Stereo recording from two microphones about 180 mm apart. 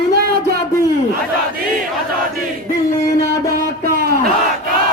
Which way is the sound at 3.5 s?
55° right (ahead or behind).